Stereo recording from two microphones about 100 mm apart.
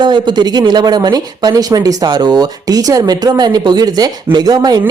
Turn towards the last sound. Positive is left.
turn(degrees=-40)  # may be behind; listen again after turning